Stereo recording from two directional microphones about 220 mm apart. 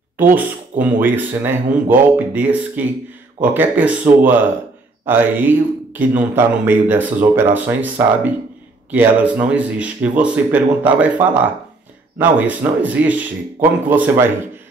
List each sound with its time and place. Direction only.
0.2 s a man's voice: 10° right (ahead or behind)
5.0 s a man's voice: 10° right (ahead or behind)